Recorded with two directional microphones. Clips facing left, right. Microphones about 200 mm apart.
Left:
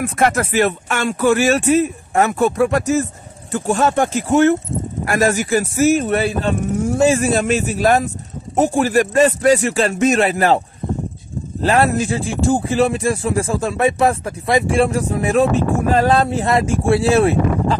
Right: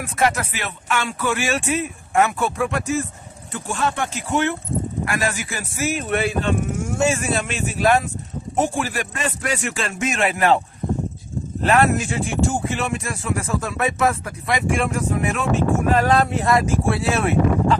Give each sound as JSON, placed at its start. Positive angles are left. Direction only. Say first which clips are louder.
{"t": 0.0, "sound": "speech", "louder": "left 4 dB", "side_deg": 50}
{"t": 11.6, "sound": "speech", "louder": "left 2 dB", "side_deg": 35}